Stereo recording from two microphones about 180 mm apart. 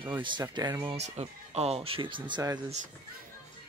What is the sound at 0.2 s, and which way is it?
Speech, 25° right (ahead or behind).